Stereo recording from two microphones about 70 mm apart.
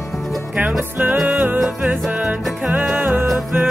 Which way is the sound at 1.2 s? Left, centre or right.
Right.